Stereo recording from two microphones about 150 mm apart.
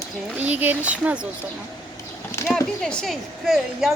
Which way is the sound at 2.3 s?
15° left (ahead or behind).